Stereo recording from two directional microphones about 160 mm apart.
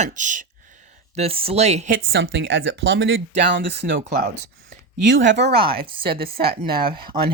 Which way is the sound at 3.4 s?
90° right.